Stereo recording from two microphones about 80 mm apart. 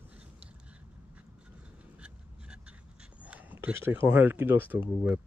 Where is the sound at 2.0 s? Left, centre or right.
Centre; by 4.0 s right.